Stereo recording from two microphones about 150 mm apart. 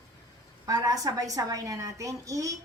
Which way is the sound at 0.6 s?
25° right (ahead or behind).